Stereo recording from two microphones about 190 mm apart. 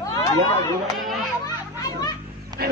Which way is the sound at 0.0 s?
15° left (ahead or behind).